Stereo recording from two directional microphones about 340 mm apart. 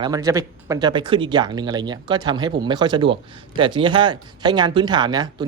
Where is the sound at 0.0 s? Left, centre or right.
Centre.